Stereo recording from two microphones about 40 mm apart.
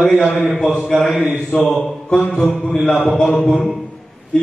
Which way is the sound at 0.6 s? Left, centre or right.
Centre.